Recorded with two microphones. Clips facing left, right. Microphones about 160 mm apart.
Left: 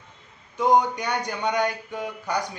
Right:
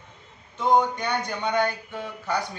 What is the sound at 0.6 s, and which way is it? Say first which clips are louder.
Speech: left 1 dB; 10° left (ahead or behind).